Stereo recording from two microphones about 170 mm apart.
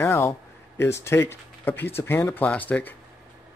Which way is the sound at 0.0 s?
15° left (ahead or behind).